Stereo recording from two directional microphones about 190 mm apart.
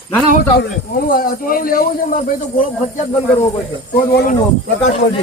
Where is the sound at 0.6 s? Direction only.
50° left (ahead or behind).